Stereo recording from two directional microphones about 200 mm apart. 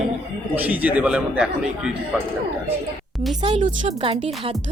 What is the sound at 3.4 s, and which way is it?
Speech, 30° right (ahead or behind).